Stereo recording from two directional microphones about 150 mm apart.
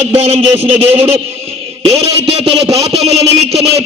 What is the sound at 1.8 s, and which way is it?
Speech, 40° right (ahead or behind).